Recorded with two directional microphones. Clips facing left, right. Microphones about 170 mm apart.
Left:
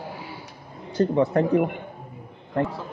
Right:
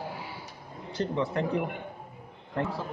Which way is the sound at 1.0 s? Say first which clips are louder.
Left 9 dB; 50° left (ahead or behind).